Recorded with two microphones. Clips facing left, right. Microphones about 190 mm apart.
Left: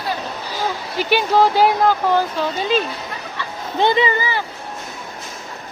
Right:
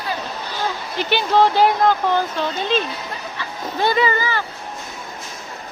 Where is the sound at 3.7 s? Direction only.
20° left (ahead or behind).